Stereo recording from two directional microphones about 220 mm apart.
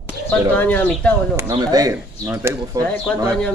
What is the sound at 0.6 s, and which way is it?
Speech, 5° left (ahead or behind).